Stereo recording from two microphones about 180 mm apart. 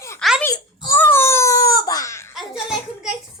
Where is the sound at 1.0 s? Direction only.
15° left (ahead or behind).